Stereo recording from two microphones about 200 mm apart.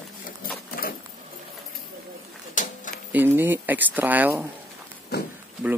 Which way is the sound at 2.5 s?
40° left (ahead or behind).